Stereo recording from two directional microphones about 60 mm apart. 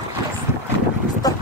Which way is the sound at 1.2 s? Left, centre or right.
Left.